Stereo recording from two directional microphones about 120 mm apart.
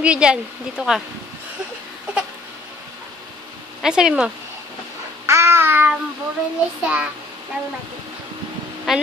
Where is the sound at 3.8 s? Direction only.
5° right (ahead or behind).